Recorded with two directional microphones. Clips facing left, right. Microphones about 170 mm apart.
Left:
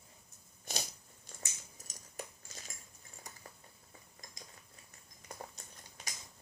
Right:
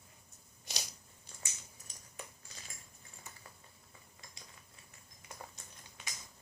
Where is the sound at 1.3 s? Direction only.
45° left (ahead or behind).